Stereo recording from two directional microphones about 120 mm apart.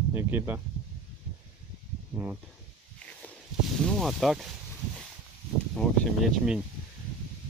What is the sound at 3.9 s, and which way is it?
Speech, centre (ahead or behind).